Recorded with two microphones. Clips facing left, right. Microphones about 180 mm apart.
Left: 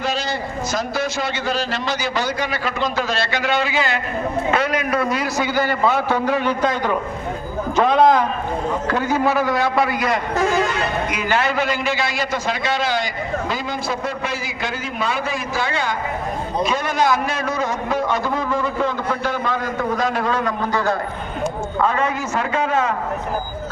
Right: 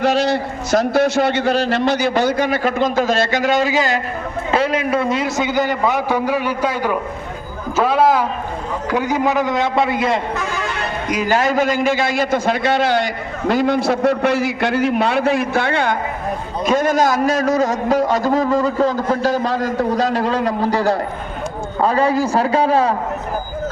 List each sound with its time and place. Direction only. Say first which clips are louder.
0.0 s a man's voice: right 7 dB; 70° right (ahead or behind); by 4.0 s 40° right (ahead or behind)
4.5 s a man's voice: right 6 dB; 30° right (ahead or behind)
11.1 s a man's voice: right 8 dB; 40° right (ahead or behind); by 16.0 s 55° right (ahead or behind)
16.6 s a man's voice: right 6 dB; 45° right (ahead or behind)